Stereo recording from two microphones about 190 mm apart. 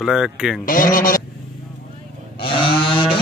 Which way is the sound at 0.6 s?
45° left (ahead or behind).